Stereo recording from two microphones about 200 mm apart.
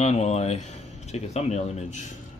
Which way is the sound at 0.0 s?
35° left (ahead or behind).